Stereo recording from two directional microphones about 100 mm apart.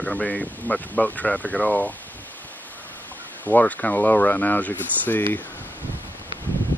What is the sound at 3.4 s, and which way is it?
Speech, 15° left (ahead or behind).